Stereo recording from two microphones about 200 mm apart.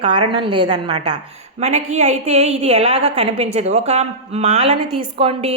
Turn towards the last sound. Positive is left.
turn(degrees=-30)  # may be behind; listen again after turning